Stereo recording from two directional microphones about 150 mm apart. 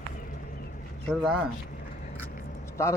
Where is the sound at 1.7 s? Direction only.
60° left (ahead or behind).